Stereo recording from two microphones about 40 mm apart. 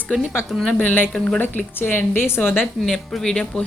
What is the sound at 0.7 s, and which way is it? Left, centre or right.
Speech, left.